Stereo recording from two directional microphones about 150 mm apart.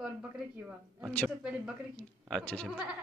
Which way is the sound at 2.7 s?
5° right (ahead or behind).